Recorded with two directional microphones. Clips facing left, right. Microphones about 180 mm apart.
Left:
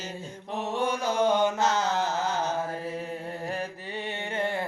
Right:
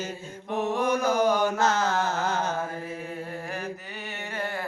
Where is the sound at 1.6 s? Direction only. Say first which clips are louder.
Right 1 dB; 50° right (ahead or behind).